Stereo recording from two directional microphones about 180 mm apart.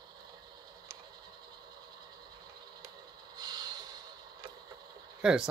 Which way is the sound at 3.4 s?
20° right (ahead or behind).